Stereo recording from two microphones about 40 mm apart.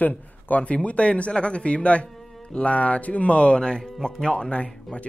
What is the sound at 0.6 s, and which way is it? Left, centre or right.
Speech, left.